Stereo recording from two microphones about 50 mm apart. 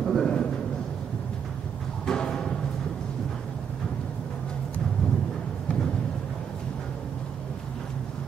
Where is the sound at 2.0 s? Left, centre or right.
Centre.